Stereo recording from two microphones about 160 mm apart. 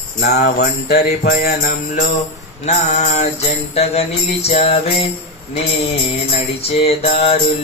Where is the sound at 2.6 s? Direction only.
45° left (ahead or behind).